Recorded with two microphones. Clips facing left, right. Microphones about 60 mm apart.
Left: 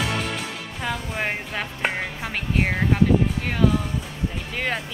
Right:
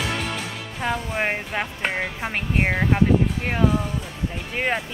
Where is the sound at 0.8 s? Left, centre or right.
Centre.